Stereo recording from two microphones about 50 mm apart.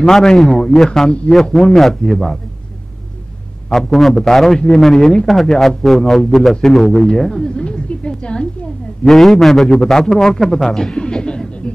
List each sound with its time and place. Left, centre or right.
0.0 s a man's voice: centre
1.3 s a man's voice: centre
3.7 s a man's voice: centre
9.0 s a man's voice: centre
10.6 s a sound: centre